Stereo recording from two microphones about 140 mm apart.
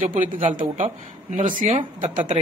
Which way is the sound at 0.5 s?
65° right (ahead or behind).